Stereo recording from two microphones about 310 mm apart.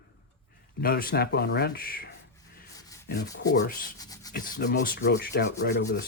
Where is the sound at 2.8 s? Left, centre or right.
Centre.